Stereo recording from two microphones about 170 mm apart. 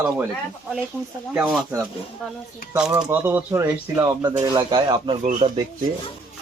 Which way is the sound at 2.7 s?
5° right (ahead or behind).